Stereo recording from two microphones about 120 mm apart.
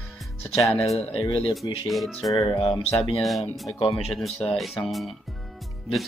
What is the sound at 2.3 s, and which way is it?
Speech, 45° left (ahead or behind).